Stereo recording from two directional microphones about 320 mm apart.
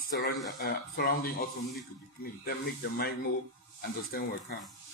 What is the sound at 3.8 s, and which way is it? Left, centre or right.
Speech, left.